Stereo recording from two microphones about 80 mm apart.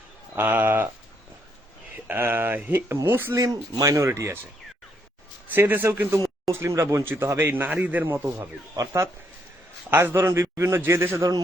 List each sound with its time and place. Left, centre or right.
0.3 s a man's voice: right
2.0 s a man's voice: right
3.3 s a man's voice: right
5.5 s a man's voice: right
8.7 s speech: right
9.9 s a man's voice: right
11.2 s speech: right